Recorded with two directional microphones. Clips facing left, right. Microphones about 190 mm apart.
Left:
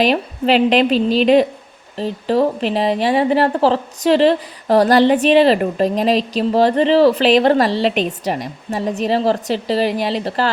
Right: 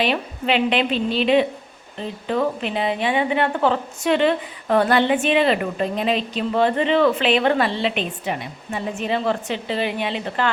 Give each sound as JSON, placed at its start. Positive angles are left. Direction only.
{"t": 0.0, "sound": "speech", "side_deg": 40}